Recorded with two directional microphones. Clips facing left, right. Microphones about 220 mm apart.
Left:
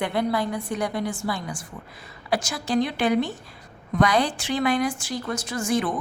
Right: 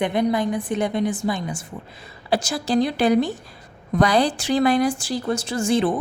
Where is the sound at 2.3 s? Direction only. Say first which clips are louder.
Right 3 dB; 30° right (ahead or behind).